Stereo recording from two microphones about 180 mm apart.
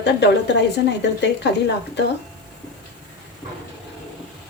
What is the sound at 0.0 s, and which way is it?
A woman's voice, 70° left (ahead or behind).